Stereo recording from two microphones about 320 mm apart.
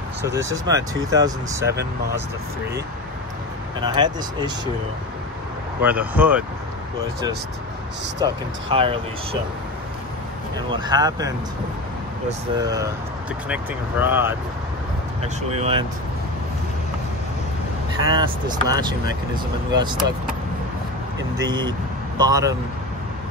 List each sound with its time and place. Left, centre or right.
0.2 s speech: centre
3.8 s speech: centre
5.8 s speech: centre
8.2 s speech: centre
10.7 s speech: centre
15.5 s speech: centre
18.0 s speech: centre
21.4 s speech: centre